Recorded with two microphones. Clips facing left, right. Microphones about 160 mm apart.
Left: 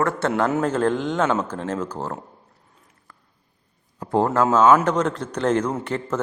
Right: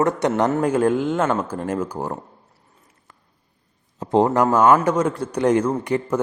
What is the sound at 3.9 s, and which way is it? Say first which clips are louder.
A man's voice: right 3 dB; 20° right (ahead or behind).